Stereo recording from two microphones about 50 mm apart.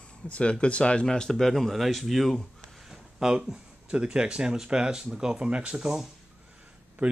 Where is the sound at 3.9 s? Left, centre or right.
Centre.